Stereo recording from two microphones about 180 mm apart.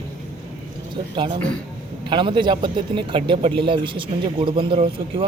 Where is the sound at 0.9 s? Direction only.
25° right (ahead or behind).